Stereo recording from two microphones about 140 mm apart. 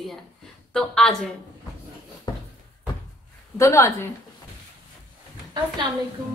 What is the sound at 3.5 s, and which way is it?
Speech, 20° left (ahead or behind).